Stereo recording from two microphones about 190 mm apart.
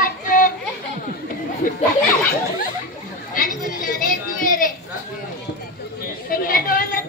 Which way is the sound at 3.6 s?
45° left (ahead or behind).